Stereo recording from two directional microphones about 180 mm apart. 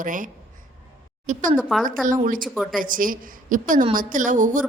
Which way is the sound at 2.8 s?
50° right (ahead or behind).